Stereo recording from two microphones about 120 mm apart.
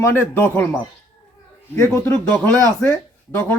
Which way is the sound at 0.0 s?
20° left (ahead or behind).